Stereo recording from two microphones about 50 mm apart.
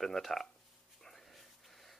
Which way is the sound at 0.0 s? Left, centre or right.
Centre.